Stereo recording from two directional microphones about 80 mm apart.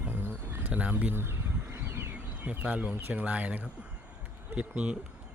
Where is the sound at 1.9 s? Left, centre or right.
Right.